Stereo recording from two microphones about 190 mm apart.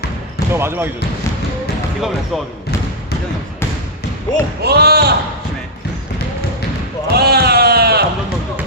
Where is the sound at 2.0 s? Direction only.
Centre (ahead or behind).